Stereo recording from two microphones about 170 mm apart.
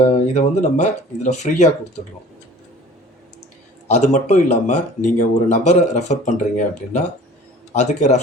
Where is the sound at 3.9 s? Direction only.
45° left (ahead or behind).